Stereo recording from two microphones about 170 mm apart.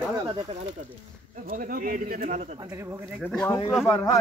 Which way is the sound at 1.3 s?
55° right (ahead or behind).